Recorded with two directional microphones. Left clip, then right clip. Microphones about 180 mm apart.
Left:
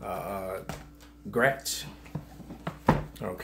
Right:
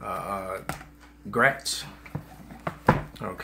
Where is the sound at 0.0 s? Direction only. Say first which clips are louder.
Right 3 dB; 5° right (ahead or behind).